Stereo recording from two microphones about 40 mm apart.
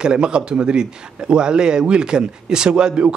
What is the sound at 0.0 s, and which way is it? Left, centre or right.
A man's voice, right.